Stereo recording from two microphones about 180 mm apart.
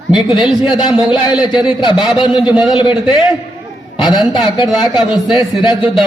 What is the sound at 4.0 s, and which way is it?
Speech, 25° left (ahead or behind).